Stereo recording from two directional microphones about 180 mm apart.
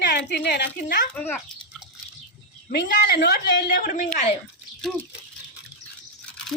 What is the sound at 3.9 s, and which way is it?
Speech, 35° left (ahead or behind).